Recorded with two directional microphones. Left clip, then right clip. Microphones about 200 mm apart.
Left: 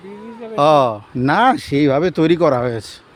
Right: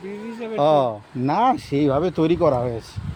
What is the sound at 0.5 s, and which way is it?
Speech, 30° left (ahead or behind).